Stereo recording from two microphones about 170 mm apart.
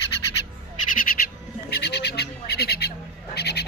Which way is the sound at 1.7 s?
80° left.